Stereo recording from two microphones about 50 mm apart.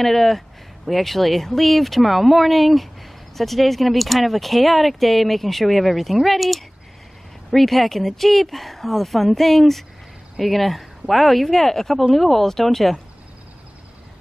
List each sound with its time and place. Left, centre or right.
0.0 s speech: centre